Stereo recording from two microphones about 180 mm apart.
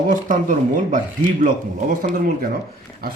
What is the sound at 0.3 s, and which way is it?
Speech, 45° right (ahead or behind).